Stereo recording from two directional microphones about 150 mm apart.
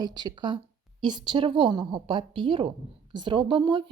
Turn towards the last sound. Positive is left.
turn(degrees=-35)  # may be behind; listen again after turning